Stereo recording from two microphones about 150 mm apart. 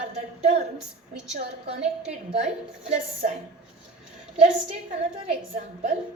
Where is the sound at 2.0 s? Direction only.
50° right (ahead or behind).